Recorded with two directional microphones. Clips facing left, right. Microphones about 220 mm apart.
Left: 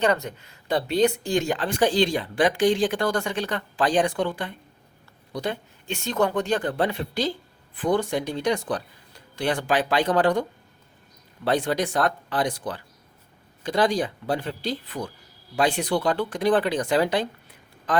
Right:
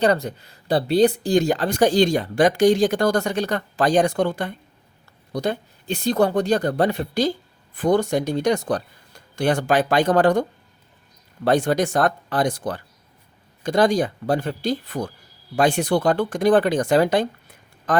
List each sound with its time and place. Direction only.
0.0 s speech: 35° right (ahead or behind)
11.4 s speech: 45° right (ahead or behind)